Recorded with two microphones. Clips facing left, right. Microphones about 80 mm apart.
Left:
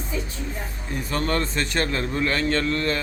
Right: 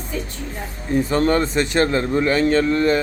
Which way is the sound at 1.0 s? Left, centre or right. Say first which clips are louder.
Right 8 dB; right.